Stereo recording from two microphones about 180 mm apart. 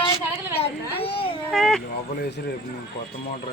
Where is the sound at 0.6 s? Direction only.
30° left (ahead or behind).